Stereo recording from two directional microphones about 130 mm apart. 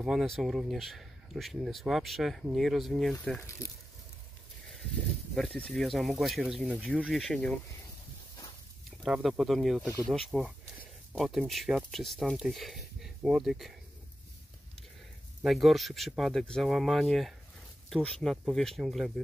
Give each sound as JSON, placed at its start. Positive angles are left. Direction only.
{"t": 0.0, "sound": "speech", "side_deg": -5}
{"t": 3.3, "sound": "speech", "side_deg": 20}
{"t": 5.3, "sound": "speech", "side_deg": 5}
{"t": 9.0, "sound": "speech", "side_deg": -5}
{"t": 15.4, "sound": "speech", "side_deg": 0}